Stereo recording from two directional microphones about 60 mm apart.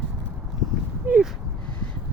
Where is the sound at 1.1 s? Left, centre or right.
Right.